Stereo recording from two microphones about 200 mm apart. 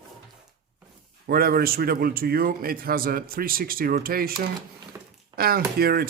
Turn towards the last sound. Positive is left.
turn(degrees=-50)  # may be behind; listen again after turning